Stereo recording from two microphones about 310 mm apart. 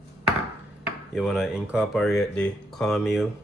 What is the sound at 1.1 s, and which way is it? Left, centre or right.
Speech, centre.